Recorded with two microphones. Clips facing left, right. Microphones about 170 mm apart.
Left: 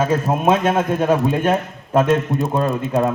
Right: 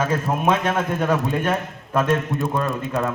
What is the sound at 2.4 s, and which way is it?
Speech, 25° left (ahead or behind).